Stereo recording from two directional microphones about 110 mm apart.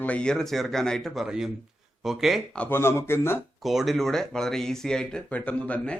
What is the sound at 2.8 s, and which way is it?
Speech, 20° left (ahead or behind).